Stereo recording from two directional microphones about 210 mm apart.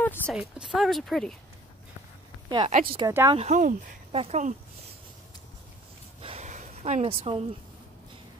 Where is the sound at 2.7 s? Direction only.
40° right (ahead or behind).